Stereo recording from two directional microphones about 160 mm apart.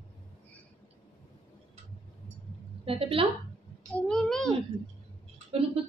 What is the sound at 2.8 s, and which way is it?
Speech, 35° right (ahead or behind).